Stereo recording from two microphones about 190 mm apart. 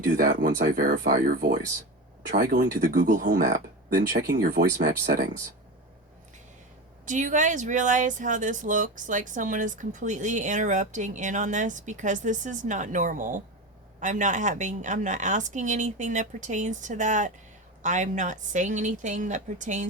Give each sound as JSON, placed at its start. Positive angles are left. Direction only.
{"t": 0.0, "sound": "speech", "side_deg": -50}
{"t": 7.0, "sound": "speech", "side_deg": -40}